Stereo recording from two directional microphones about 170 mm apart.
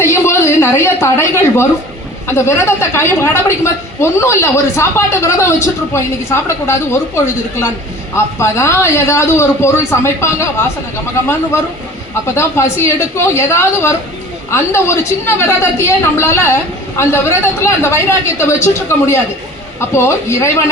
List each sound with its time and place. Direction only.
0.0 s a sound: 15° left (ahead or behind)
2.2 s a woman's voice: 15° left (ahead or behind)
8.1 s a woman's voice: 15° left (ahead or behind)
12.2 s a woman's voice: 15° left (ahead or behind)